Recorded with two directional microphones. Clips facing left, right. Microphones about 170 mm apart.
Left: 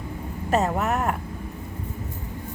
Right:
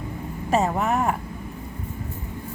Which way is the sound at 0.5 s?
Centre (ahead or behind).